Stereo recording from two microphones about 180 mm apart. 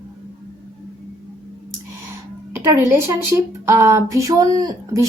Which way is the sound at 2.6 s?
15° right (ahead or behind).